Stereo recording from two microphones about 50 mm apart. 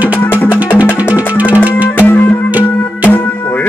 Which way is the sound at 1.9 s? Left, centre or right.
Left.